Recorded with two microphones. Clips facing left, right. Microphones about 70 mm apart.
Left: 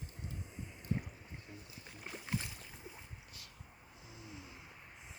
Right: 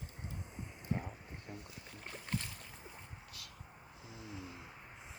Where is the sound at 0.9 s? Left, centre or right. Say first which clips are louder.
Even; centre.